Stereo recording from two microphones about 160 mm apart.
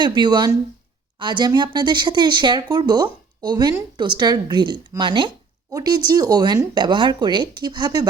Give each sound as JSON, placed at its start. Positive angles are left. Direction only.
{"t": 0.0, "sound": "speech", "side_deg": -30}